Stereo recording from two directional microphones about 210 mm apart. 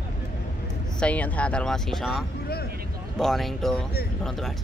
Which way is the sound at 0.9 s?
5° left (ahead or behind).